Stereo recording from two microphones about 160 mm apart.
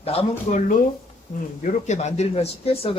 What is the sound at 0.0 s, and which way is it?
Speech, 40° left (ahead or behind).